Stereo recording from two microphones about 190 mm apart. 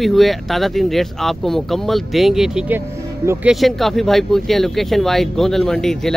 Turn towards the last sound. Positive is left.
turn(degrees=0)  # may be behind; listen again after turning